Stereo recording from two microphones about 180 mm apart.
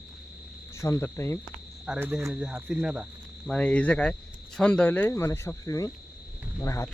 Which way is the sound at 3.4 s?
5° left (ahead or behind).